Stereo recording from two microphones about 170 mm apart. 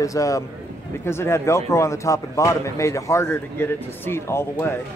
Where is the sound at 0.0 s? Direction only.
20° left (ahead or behind).